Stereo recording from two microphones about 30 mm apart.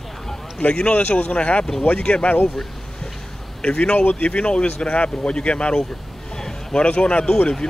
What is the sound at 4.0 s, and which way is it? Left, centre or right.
Speech, left.